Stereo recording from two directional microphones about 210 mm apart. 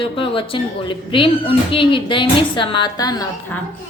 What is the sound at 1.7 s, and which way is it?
A woman's voice, 25° left (ahead or behind).